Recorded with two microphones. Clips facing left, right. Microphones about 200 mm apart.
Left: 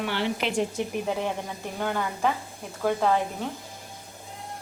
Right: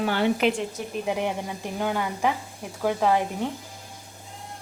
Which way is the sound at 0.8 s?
25° left (ahead or behind).